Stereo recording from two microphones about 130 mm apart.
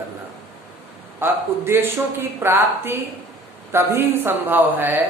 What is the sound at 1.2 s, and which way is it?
A man's voice, 15° right (ahead or behind).